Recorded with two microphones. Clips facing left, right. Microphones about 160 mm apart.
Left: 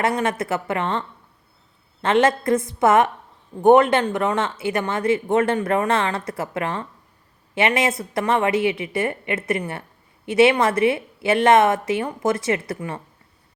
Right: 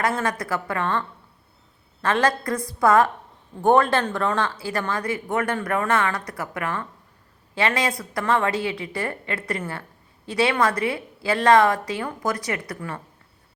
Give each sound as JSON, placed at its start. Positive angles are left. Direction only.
{"t": 0.0, "sound": "a woman's voice", "side_deg": 20}